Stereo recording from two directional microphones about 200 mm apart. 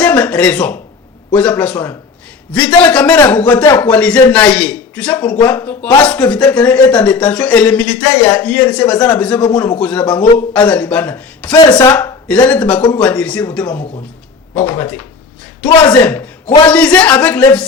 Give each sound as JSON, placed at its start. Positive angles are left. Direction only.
{"t": 0.0, "sound": "a man's voice", "side_deg": 5}
{"t": 11.5, "sound": "speech", "side_deg": 20}
{"t": 11.9, "sound": "speech", "side_deg": 5}
{"t": 14.5, "sound": "a man's voice", "side_deg": 5}
{"t": 15.6, "sound": "speech", "side_deg": 20}
{"t": 16.0, "sound": "a man's voice", "side_deg": 5}